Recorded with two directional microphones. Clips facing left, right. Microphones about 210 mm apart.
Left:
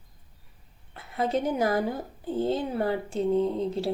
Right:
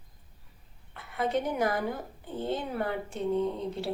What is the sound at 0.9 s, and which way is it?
A woman's voice, 25° left (ahead or behind).